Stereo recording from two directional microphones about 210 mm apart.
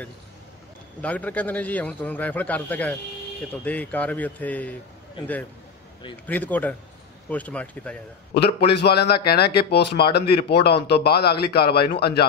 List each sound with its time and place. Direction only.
1.0 s a man's voice: 5° left (ahead or behind)
6.2 s a man's voice: 10° left (ahead or behind)
8.5 s speech: 50° left (ahead or behind)